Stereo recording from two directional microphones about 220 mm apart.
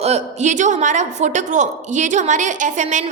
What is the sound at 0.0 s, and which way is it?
A woman's voice, 30° right (ahead or behind).